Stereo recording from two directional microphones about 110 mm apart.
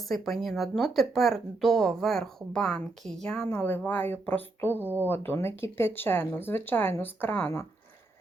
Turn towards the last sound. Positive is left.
turn(degrees=15)  # may be behind; listen again after turning